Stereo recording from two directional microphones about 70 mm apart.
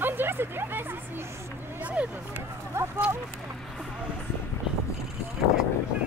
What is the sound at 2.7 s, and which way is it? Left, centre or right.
Speech, right.